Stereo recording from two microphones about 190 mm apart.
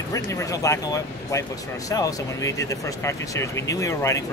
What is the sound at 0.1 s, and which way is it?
Speech, 15° left (ahead or behind).